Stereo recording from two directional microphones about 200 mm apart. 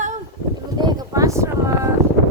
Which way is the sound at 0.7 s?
20° right (ahead or behind).